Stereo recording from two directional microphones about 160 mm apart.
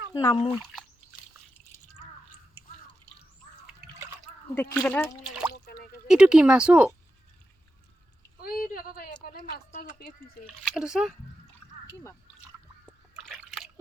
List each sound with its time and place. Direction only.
0.1 s speech: 25° left (ahead or behind)
4.5 s speech: 15° left (ahead or behind)
5.5 s a sound: 90° left
6.1 s speech: 5° right (ahead or behind)
8.4 s speech: 60° left (ahead or behind)
10.6 s speech: centre (ahead or behind)
12.8 s splash: centre (ahead or behind)